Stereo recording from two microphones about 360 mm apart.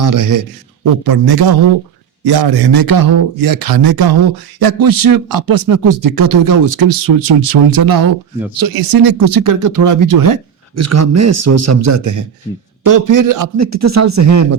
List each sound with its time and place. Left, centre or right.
0.0 s speech: right
1.0 s a man's voice: right
4.6 s a man's voice: right
10.8 s a man's voice: right